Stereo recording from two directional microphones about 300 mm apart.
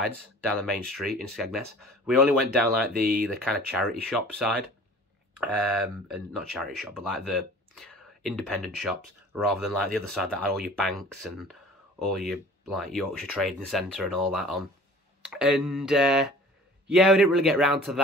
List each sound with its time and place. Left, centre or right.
0.0 s speech: centre
2.9 s speech: right
3.5 s speech: centre
5.6 s speech: centre